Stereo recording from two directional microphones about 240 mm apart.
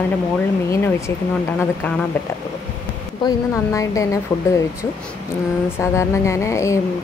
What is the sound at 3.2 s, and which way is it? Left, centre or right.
Speech, centre.